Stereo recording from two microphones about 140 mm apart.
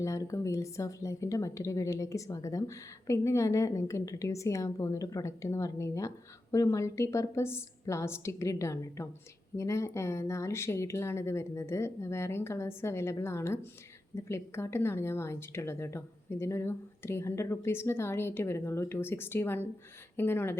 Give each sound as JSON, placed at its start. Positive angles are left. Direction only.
{"t": 0.0, "sound": "a woman's voice", "side_deg": 20}